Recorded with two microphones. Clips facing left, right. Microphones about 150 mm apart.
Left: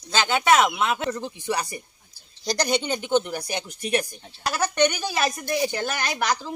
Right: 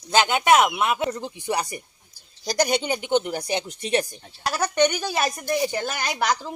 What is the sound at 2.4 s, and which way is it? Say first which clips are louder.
Speech: right 1 dB; 5° right (ahead or behind).